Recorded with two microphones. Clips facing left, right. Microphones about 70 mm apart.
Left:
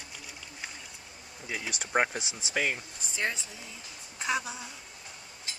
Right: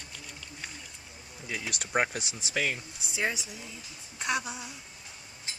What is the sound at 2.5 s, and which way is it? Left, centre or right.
Speech, centre.